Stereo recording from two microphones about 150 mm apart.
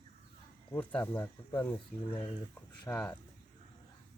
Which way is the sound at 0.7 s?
15° left (ahead or behind).